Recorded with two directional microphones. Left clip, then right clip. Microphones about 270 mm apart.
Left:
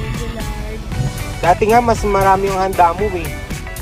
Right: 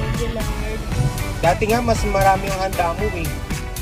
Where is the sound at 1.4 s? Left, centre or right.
Left.